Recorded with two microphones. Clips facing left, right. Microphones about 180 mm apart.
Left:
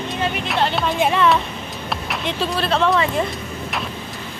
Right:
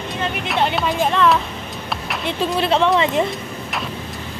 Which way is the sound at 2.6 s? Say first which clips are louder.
Right 2 dB; 20° right (ahead or behind).